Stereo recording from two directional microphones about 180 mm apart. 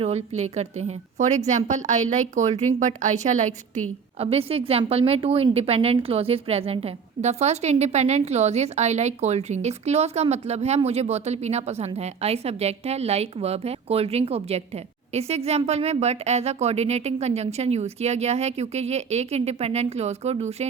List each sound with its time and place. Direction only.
0.0 s a woman's voice: 35° right (ahead or behind)